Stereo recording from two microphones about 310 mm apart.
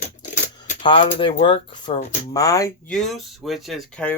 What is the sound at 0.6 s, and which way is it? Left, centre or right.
Speech, centre.